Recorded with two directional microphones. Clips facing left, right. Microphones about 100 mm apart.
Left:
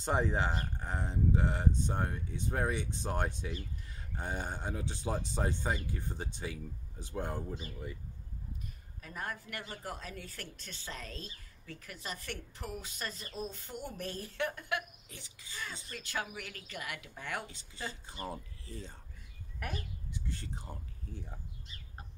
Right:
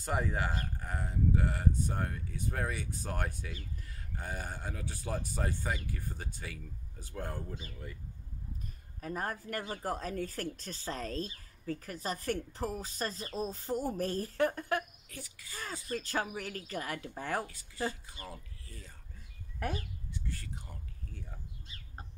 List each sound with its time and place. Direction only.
0.0 s speech: 25° left (ahead or behind)
9.0 s speech: 40° right (ahead or behind)
15.0 s speech: 25° left (ahead or behind)
15.5 s speech: 40° right (ahead or behind)
18.0 s speech: 30° left (ahead or behind)
20.1 s speech: 25° left (ahead or behind)